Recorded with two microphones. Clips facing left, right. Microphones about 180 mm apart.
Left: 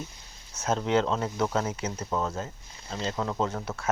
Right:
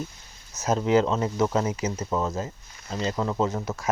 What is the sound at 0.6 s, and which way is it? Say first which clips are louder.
Speech: right 4 dB; 5° right (ahead or behind).